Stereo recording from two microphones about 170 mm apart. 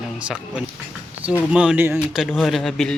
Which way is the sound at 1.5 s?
5° right (ahead or behind).